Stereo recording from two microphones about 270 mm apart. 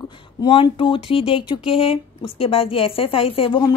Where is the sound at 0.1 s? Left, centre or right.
Centre.